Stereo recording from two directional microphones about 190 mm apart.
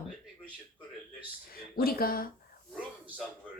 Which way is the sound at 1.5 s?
55° left (ahead or behind).